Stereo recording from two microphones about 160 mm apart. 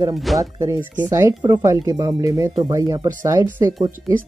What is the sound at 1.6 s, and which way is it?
Speech, 20° right (ahead or behind).